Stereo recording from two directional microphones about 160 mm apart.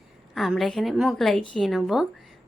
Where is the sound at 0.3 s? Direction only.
Centre (ahead or behind).